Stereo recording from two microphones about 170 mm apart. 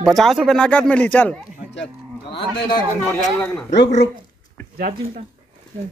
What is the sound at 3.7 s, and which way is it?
Speech, 90° left.